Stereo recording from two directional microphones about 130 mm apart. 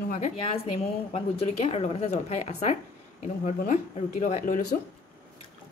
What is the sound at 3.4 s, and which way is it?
Speech, 85° left.